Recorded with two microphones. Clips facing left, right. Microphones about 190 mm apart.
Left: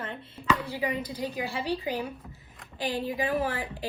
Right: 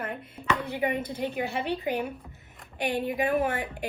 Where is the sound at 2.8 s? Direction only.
55° right (ahead or behind).